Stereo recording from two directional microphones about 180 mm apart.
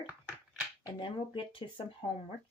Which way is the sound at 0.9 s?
25° left (ahead or behind).